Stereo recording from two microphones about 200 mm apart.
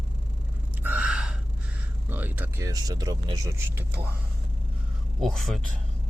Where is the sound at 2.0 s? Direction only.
10° right (ahead or behind).